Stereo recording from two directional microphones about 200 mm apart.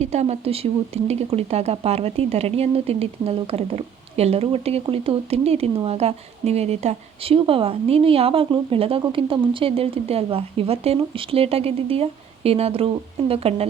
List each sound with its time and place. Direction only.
0.0 s speech: 35° right (ahead or behind)